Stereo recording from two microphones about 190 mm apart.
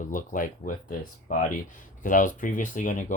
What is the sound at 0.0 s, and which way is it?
Speech, 45° left (ahead or behind).